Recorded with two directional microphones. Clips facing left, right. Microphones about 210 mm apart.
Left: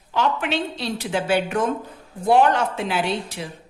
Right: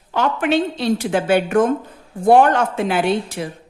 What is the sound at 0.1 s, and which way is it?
A woman's voice, 50° right (ahead or behind).